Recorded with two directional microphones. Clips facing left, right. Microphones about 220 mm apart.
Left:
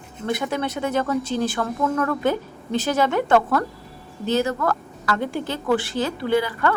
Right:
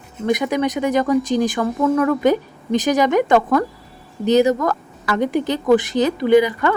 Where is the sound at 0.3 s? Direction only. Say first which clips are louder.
Right 6 dB; 15° right (ahead or behind).